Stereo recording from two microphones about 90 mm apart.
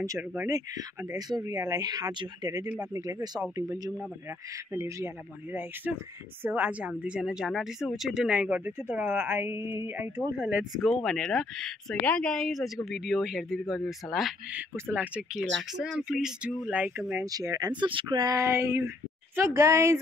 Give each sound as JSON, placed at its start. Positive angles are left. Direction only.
{"t": 0.2, "sound": "speech", "side_deg": -20}
{"t": 0.5, "sound": "speech", "side_deg": -40}
{"t": 5.5, "sound": "speech", "side_deg": -20}
{"t": 10.9, "sound": "speech", "side_deg": 5}
{"t": 14.5, "sound": "speech", "side_deg": -20}
{"t": 15.3, "sound": "speech", "side_deg": -5}
{"t": 17.2, "sound": "speech", "side_deg": -40}
{"t": 18.3, "sound": "speech", "side_deg": -30}